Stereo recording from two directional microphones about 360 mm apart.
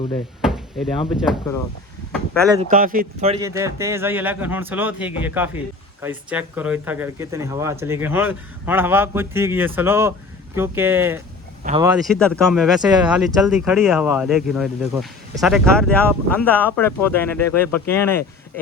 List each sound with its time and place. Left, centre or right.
0.4 s speech: centre
2.5 s speech: centre
12.0 s speech: centre